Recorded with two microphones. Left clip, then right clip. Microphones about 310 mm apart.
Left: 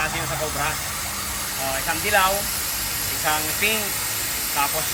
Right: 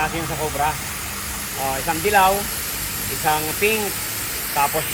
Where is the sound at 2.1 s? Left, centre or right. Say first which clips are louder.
Right 4 dB; centre.